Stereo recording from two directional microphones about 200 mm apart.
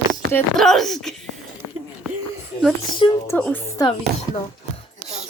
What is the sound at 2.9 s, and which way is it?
Speech, 25° left (ahead or behind).